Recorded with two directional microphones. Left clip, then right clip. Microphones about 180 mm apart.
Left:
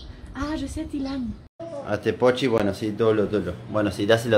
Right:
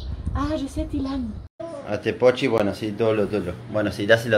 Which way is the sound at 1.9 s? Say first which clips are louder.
Right 2 dB; 30° left (ahead or behind).